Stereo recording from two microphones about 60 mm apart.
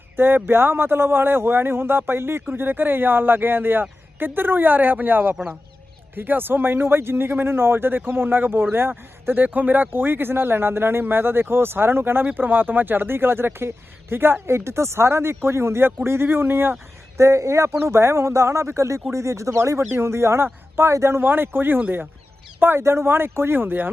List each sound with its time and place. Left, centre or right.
0.2 s speech: right
17.2 s speech: right
21.2 s speech: right
22.8 s speech: right